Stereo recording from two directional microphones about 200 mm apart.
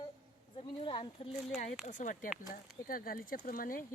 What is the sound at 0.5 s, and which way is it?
Speech, 25° left (ahead or behind).